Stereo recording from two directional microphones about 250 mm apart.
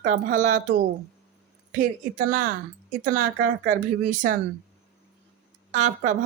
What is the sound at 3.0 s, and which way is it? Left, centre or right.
Speech, right.